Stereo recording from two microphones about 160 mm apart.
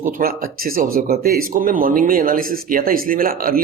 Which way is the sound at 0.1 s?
65° right (ahead or behind).